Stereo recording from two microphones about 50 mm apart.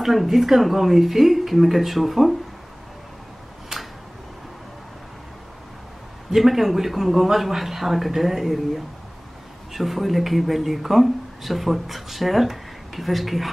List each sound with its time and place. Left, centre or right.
0.0 s speech: centre
6.3 s speech: centre